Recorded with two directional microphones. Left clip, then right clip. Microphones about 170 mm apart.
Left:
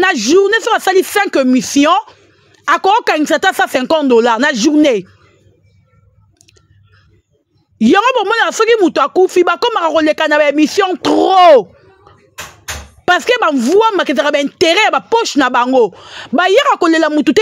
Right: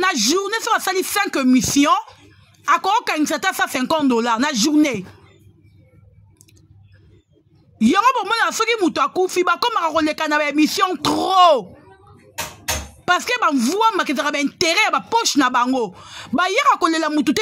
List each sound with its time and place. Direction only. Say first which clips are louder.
0.0 s speech: left 8 dB; 45° left (ahead or behind)
7.8 s speech: left 6 dB; 45° left (ahead or behind)
13.0 s speech: left 7 dB; 50° left (ahead or behind)